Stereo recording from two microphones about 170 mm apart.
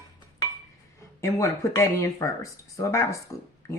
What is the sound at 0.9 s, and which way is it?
Speech, 15° left (ahead or behind).